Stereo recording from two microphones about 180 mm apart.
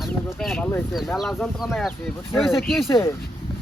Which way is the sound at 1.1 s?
Centre (ahead or behind).